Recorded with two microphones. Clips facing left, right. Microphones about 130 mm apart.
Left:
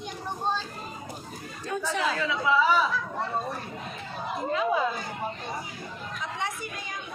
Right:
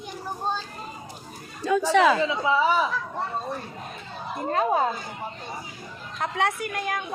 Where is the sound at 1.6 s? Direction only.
90° right.